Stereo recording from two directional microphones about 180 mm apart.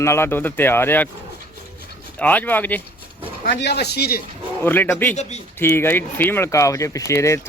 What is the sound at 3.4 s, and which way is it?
Speech, 70° left (ahead or behind).